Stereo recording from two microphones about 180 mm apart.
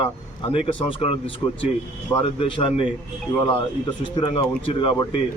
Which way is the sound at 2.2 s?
30° left (ahead or behind).